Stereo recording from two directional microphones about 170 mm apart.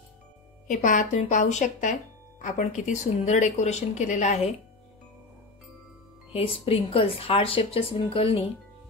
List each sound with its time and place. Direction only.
0.7 s speech: 50° left (ahead or behind)
6.3 s speech: 35° left (ahead or behind)